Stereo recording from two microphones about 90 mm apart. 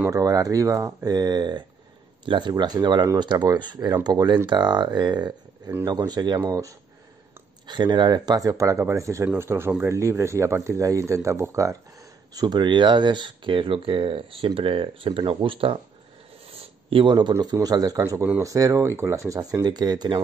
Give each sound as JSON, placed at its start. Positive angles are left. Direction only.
{"t": 0.1, "sound": "speech", "side_deg": -40}
{"t": 7.6, "sound": "speech", "side_deg": -55}
{"t": 12.4, "sound": "speech", "side_deg": -55}
{"t": 17.1, "sound": "speech", "side_deg": -55}
{"t": 19.6, "sound": "speech", "side_deg": -50}